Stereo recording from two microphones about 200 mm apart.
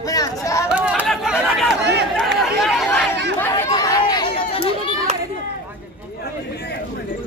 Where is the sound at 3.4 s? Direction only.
10° left (ahead or behind); by 4.8 s 30° left (ahead or behind).